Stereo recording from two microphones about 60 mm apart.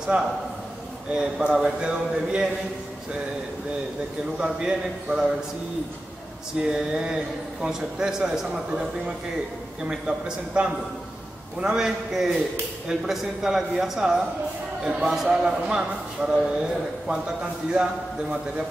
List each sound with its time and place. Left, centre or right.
0.0 s a man's voice: centre
4.4 s a man's voice: centre
6.7 s a man's voice: centre